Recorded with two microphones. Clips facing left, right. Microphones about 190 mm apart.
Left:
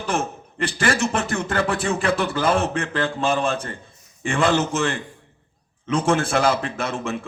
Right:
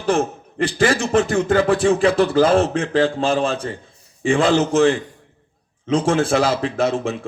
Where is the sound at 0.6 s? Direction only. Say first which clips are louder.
Right 5 dB; 55° left (ahead or behind).